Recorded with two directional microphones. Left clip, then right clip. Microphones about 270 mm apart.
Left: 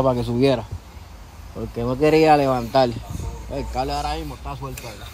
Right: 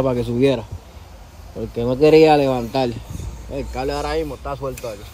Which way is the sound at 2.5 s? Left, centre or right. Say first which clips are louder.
Left 2 dB; left.